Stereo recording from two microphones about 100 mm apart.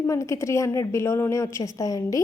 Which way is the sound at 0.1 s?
30° left (ahead or behind).